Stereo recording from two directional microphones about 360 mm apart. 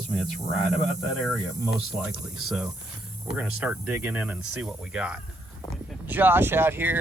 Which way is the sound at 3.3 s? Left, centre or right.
Centre.